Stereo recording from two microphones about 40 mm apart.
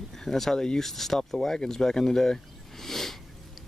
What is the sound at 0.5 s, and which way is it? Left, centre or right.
Speech, centre.